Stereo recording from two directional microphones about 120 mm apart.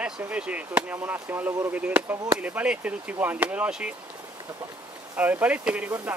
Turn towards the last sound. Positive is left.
turn(degrees=-10)  # may be behind; listen again after turning